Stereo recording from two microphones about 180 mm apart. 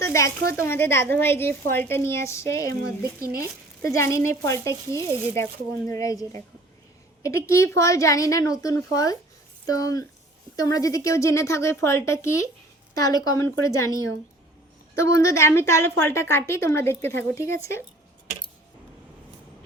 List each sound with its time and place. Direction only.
0.0 s a woman's voice: 15° left (ahead or behind)
3.8 s a woman's voice: 15° left (ahead or behind)
4.9 s speech: 20° right (ahead or behind)
5.3 s a woman's voice: 15° left (ahead or behind)
15.0 s a woman's voice: 20° left (ahead or behind)